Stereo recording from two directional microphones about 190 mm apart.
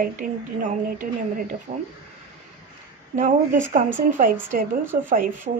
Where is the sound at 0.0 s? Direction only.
45° right (ahead or behind).